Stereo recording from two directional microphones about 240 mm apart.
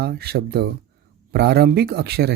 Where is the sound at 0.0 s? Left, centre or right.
Right.